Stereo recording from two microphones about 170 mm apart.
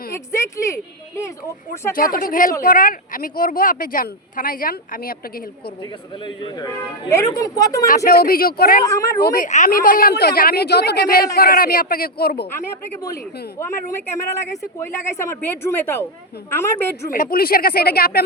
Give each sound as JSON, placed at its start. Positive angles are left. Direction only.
{"t": 0.3, "sound": "speech", "side_deg": 15}
{"t": 1.9, "sound": "speech", "side_deg": 55}
{"t": 6.2, "sound": "a man's voice", "side_deg": 25}
{"t": 7.9, "sound": "speech", "side_deg": 65}
{"t": 8.8, "sound": "a man's voice", "side_deg": 20}
{"t": 9.2, "sound": "speech", "side_deg": 60}
{"t": 9.5, "sound": "speech", "side_deg": 50}
{"t": 13.6, "sound": "speech", "side_deg": 15}
{"t": 17.1, "sound": "speech", "side_deg": 60}